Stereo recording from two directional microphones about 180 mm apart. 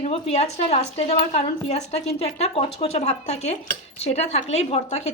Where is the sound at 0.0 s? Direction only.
35° left (ahead or behind).